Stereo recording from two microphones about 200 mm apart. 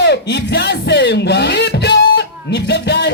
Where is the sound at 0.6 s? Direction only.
60° left (ahead or behind).